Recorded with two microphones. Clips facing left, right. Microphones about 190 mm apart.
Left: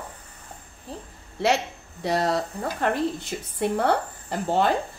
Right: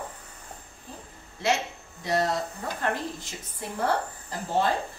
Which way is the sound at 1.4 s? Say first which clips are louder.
Left 4 dB; 65° left (ahead or behind).